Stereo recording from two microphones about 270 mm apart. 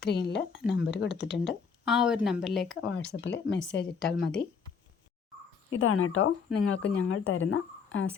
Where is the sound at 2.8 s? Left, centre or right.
Left.